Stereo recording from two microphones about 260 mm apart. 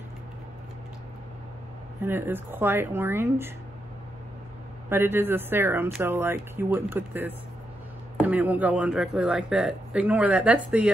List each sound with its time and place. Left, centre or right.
2.0 s speech: centre
4.8 s a man's voice: centre